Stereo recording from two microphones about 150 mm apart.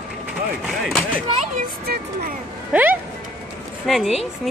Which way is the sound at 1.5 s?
80° right.